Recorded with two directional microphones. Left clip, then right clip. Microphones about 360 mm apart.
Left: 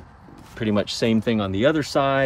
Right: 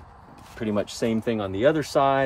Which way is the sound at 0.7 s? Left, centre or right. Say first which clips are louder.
Left 4 dB; left.